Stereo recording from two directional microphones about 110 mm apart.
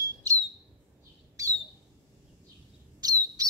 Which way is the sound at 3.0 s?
35° right (ahead or behind).